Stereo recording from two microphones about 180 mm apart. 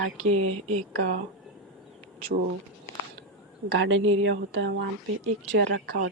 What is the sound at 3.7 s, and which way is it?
A woman's voice, 90° right.